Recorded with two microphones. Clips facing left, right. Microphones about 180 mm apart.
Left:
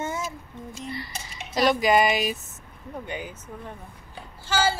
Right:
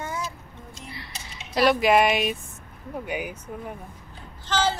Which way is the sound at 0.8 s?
Centre (ahead or behind).